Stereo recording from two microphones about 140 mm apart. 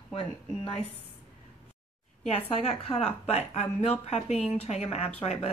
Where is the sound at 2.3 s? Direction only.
45° left (ahead or behind).